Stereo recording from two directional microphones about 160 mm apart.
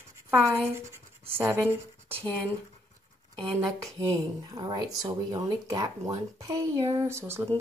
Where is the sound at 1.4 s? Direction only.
15° right (ahead or behind).